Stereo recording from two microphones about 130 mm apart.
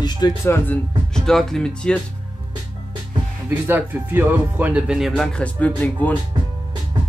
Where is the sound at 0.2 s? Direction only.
30° left (ahead or behind).